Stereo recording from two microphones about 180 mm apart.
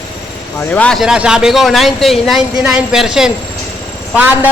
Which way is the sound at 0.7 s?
5° left (ahead or behind).